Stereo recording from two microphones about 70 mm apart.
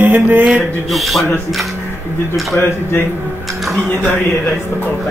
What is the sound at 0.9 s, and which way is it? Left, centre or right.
Speech, centre.